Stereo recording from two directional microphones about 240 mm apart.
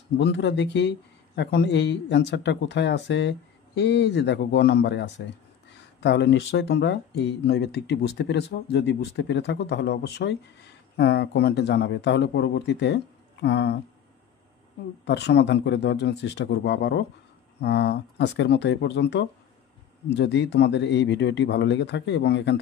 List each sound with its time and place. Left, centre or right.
0.2 s speech: left
15.0 s speech: left